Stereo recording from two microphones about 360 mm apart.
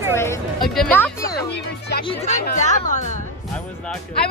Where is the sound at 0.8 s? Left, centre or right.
Centre.